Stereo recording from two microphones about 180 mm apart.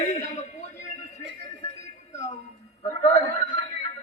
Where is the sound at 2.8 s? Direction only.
40° left (ahead or behind).